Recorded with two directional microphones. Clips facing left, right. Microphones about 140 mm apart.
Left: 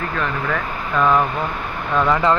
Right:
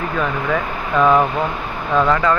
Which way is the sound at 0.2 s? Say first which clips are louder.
Right 4 dB; 5° right (ahead or behind).